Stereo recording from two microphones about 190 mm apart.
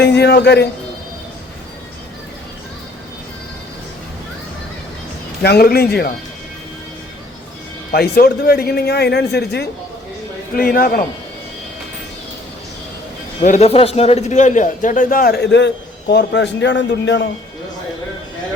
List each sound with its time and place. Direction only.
0.0 s speech: 60° left (ahead or behind)
5.4 s speech: 55° left (ahead or behind)
7.9 s a man's voice: 55° left (ahead or behind)
13.4 s a man's voice: 35° left (ahead or behind); by 17.2 s 70° left (ahead or behind)